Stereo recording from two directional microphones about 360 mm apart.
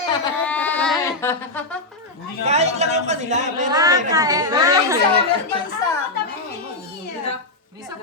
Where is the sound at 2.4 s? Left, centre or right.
Centre.